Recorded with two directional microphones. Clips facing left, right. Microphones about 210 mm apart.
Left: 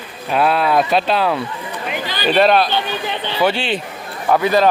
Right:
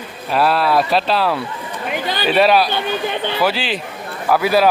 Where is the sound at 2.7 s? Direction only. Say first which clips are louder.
Right 1 dB; 50° right (ahead or behind).